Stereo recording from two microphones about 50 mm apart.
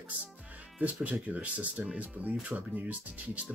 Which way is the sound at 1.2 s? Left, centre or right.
Right.